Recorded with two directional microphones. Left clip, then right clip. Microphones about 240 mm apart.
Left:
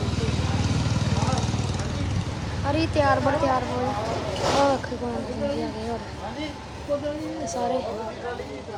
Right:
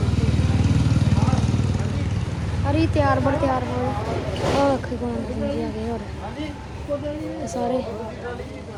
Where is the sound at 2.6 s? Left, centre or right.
Centre.